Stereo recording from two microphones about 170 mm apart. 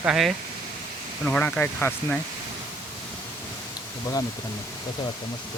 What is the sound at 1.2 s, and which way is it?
Speech, 5° left (ahead or behind).